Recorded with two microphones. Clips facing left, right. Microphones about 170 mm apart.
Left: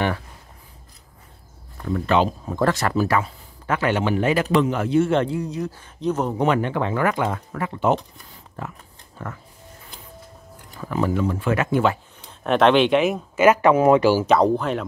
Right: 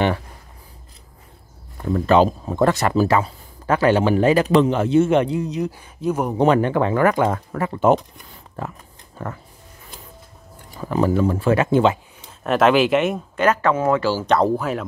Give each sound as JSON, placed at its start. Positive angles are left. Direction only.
{"t": 2.0, "sound": "speech", "side_deg": -40}
{"t": 2.5, "sound": "a man's voice", "side_deg": -20}
{"t": 3.0, "sound": "a man's voice", "side_deg": -30}
{"t": 6.3, "sound": "speech", "side_deg": -35}
{"t": 10.8, "sound": "speech", "side_deg": -30}
{"t": 12.3, "sound": "speech", "side_deg": -5}
{"t": 14.2, "sound": "speech", "side_deg": 0}